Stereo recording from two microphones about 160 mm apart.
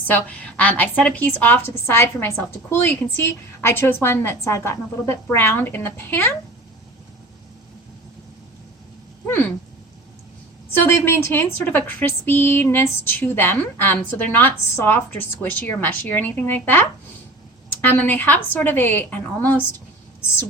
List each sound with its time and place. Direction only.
0.1 s a woman's voice: 10° left (ahead or behind)
9.2 s a sound: 10° left (ahead or behind)
10.7 s a woman's voice: 15° left (ahead or behind)